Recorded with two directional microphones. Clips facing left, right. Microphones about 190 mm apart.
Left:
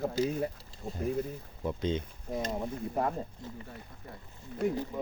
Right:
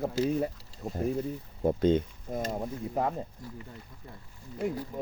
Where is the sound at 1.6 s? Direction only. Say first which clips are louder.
Right 8 dB; 50° right (ahead or behind).